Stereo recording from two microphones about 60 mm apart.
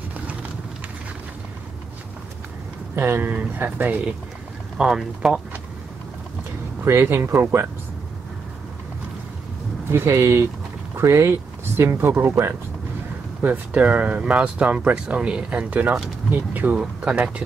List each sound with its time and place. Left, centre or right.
3.0 s speech: right
4.7 s speech: centre
6.8 s speech: right
9.8 s speech: right
13.4 s speech: right
15.7 s speech: right